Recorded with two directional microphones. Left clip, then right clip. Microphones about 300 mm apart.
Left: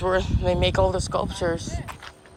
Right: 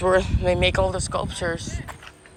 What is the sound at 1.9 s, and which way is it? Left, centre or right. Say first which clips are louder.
Music: left 1 dB; centre.